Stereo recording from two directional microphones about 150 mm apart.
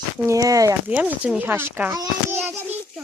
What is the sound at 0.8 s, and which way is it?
A woman's voice, 10° right (ahead or behind).